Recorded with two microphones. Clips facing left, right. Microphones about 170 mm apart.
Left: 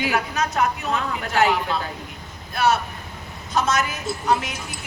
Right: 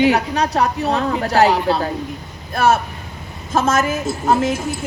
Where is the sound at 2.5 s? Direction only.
50° right (ahead or behind).